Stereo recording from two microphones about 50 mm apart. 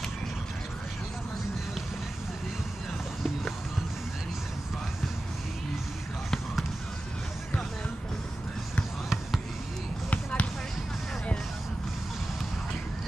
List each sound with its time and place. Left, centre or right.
10.0 s basketball bounce: left